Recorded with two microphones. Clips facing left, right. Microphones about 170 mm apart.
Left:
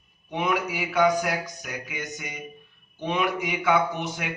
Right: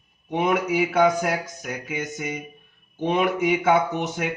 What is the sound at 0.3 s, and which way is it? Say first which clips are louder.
Speech: right 4 dB; 45° right (ahead or behind).